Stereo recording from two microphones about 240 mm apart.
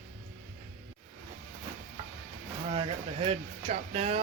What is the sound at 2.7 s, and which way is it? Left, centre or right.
Speech, right.